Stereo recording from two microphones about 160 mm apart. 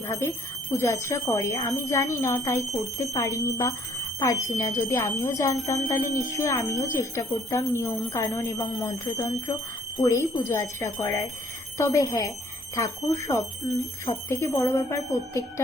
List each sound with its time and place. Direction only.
0.1 s speech: 15° left (ahead or behind)